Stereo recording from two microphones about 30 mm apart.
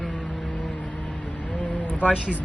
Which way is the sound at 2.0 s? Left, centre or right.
Left.